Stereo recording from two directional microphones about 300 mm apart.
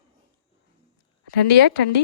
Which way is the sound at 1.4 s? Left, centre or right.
Left.